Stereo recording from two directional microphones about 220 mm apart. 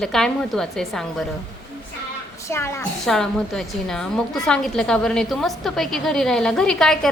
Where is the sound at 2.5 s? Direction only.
10° left (ahead or behind).